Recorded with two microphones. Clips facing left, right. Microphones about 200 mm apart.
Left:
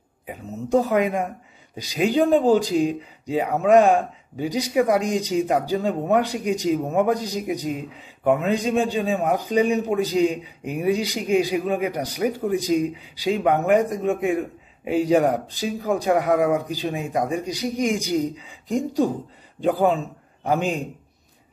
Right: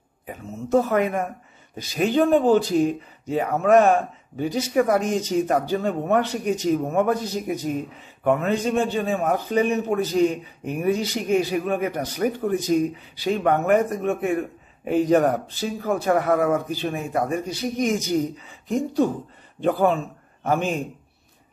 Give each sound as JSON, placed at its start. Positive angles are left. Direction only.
{"t": 0.7, "sound": "a man's voice", "side_deg": 15}